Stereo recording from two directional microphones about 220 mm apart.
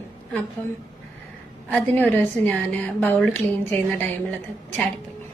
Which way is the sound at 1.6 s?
5° left (ahead or behind).